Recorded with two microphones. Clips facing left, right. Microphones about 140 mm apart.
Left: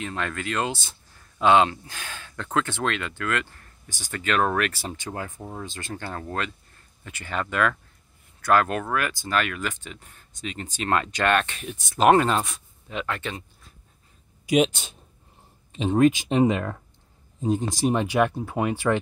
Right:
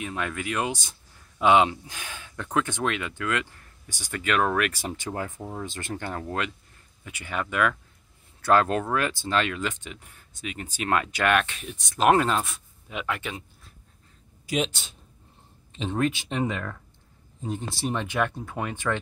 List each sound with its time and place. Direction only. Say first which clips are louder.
0.0 s speech: left 1 dB; 10° right (ahead or behind)
5.8 s speech: right 1 dB; 20° right (ahead or behind)
8.4 s speech: even; 30° right (ahead or behind); by 13.4 s 10° right (ahead or behind)
14.4 s speech: left 7 dB; 15° left (ahead or behind)